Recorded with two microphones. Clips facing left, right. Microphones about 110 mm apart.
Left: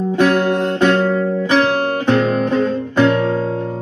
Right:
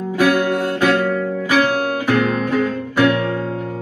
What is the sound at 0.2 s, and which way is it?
Guitar, 25° left (ahead or behind).